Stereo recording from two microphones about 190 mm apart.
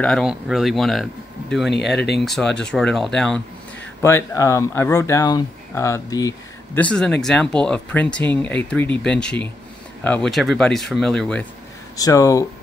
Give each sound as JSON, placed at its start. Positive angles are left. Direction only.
{"t": 0.0, "sound": "speech", "side_deg": 0}
{"t": 2.0, "sound": "speech", "side_deg": 60}
{"t": 2.2, "sound": "speech", "side_deg": 5}
{"t": 4.0, "sound": "speech", "side_deg": 15}
{"t": 6.8, "sound": "speech", "side_deg": 5}
{"t": 12.0, "sound": "speech", "side_deg": 20}